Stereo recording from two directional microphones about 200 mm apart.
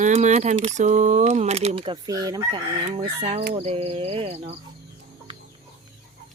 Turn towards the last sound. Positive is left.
turn(degrees=-30)  # may be behind; listen again after turning